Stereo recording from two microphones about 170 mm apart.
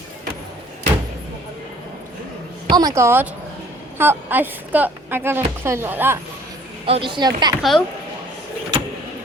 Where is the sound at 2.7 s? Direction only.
20° right (ahead or behind).